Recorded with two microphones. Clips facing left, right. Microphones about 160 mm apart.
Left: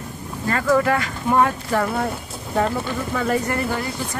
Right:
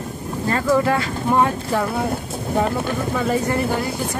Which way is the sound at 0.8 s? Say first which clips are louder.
Right 1 dB; 20° right (ahead or behind).